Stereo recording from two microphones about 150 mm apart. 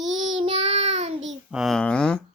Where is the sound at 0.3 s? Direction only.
45° right (ahead or behind).